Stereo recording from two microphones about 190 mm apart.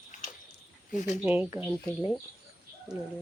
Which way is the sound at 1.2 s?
10° right (ahead or behind).